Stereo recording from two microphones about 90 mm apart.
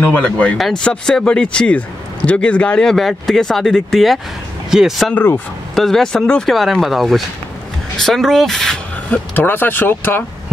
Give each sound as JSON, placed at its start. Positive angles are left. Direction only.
{"t": 0.0, "sound": "speech", "side_deg": 15}
{"t": 0.6, "sound": "speech", "side_deg": 0}
{"t": 5.1, "sound": "speech", "side_deg": 25}
{"t": 5.8, "sound": "speech", "side_deg": 5}
{"t": 9.1, "sound": "speech", "side_deg": 20}